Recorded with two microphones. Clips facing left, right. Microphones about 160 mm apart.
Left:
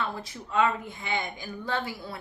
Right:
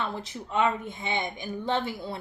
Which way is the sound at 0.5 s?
20° right (ahead or behind).